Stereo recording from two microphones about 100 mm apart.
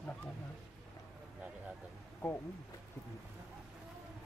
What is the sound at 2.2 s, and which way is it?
Speech, 10° left (ahead or behind).